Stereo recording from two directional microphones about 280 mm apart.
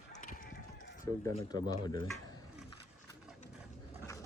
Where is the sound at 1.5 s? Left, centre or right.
Centre.